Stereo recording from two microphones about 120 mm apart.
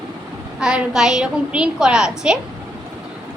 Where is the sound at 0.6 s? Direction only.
5° right (ahead or behind).